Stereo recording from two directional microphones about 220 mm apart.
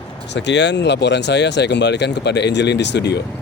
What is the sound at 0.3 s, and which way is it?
Speech, 50° left (ahead or behind).